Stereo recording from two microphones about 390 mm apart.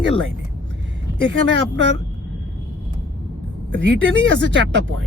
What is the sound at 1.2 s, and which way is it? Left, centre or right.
Speech, right.